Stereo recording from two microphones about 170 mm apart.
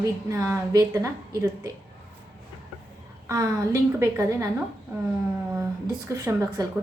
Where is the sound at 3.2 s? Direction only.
20° right (ahead or behind).